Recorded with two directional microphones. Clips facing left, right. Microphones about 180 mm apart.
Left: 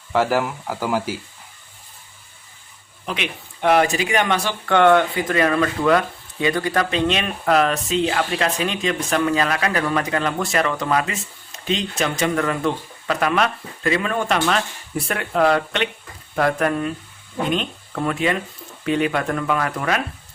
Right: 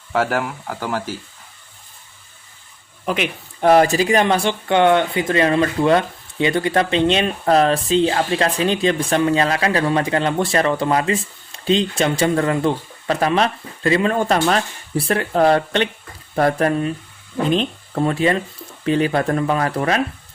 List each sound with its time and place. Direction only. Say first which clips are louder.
0.1 s speech: left 1 dB; centre (ahead or behind)
3.1 s speech: right 5 dB; 40° right (ahead or behind)